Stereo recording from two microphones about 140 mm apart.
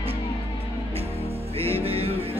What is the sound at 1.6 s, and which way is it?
Music, 45° right (ahead or behind).